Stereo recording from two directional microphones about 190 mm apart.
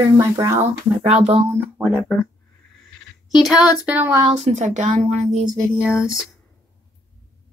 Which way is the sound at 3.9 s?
10° right (ahead or behind).